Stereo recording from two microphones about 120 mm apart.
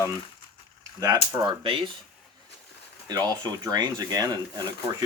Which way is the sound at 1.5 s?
45° right (ahead or behind).